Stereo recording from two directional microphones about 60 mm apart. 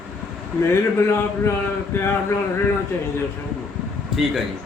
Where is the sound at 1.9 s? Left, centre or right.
Left.